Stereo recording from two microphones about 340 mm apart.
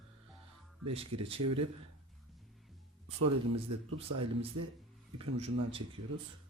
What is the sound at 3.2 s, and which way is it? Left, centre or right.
A man's voice, right.